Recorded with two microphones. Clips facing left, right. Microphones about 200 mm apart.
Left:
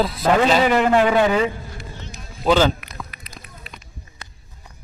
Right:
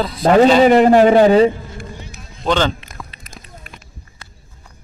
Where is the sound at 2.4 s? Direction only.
5° left (ahead or behind).